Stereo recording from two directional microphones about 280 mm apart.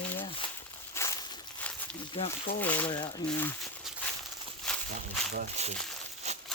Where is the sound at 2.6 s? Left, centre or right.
Centre.